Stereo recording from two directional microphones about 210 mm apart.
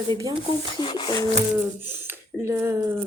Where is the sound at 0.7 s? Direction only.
25° left (ahead or behind).